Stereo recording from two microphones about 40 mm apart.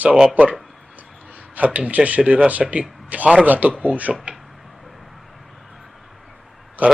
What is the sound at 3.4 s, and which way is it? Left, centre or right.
Speech, right.